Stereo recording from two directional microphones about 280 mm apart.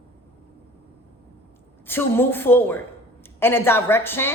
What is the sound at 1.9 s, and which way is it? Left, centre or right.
A man's voice, centre.